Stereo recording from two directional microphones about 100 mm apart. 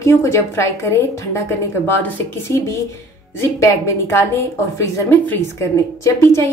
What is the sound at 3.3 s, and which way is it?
A woman's voice, 30° left (ahead or behind).